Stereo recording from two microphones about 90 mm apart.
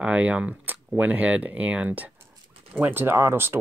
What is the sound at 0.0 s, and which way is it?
Speech, 15° right (ahead or behind).